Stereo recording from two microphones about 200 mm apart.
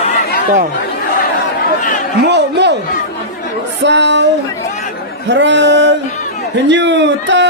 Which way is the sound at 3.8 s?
60° right (ahead or behind).